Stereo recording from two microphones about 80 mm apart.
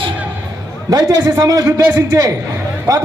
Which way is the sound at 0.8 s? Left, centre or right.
Right.